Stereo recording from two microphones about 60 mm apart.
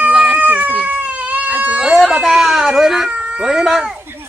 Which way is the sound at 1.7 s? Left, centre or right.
Centre.